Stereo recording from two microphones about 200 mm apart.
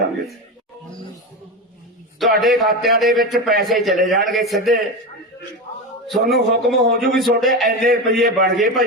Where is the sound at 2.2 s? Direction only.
Centre (ahead or behind).